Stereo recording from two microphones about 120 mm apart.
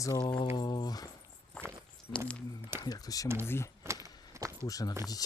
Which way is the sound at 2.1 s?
35° left (ahead or behind).